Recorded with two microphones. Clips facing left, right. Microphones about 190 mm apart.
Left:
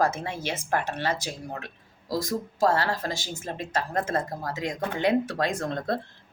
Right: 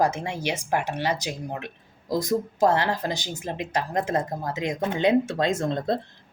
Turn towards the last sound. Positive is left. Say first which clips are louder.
# right 4 dB
turn(degrees=-25)  # may be behind; listen again after turning